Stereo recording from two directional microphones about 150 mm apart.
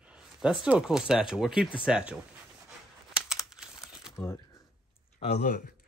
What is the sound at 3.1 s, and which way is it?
Crumpling, 5° right (ahead or behind).